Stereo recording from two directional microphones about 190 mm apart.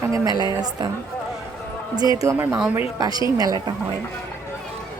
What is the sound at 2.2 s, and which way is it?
A woman's voice, 15° right (ahead or behind).